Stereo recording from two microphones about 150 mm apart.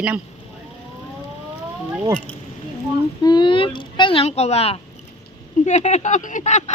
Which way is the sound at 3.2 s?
30° left (ahead or behind).